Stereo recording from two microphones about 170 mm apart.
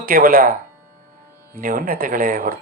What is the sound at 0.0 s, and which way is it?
Speech, 55° right (ahead or behind).